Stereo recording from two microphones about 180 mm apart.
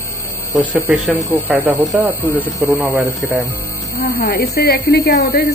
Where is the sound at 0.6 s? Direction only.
5° right (ahead or behind).